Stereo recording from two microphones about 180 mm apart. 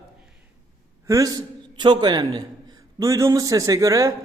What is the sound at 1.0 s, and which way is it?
A man's voice, 20° right (ahead or behind).